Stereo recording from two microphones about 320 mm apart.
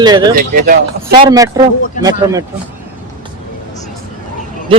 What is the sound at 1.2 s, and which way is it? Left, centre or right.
Speech, centre.